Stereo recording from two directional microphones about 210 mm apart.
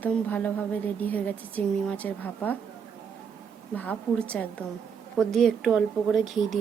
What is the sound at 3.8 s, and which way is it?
A woman's voice, 5° left (ahead or behind).